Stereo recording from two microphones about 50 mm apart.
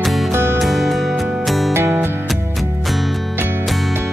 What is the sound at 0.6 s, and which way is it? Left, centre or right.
Music, centre.